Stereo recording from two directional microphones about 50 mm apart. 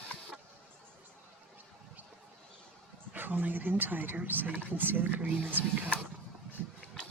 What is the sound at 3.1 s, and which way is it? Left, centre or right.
Speech, right.